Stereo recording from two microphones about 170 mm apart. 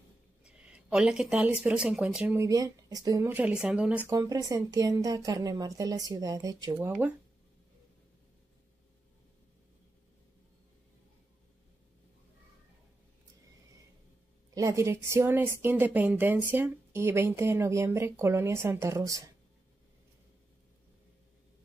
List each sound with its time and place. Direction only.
0.4 s speech: 5° right (ahead or behind)
2.4 s speech: 20° right (ahead or behind)
14.5 s speech: 20° right (ahead or behind)